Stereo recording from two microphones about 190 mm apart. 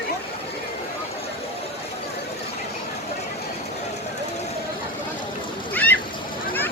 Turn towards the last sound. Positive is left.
turn(degrees=10)  # may be behind; listen again after turning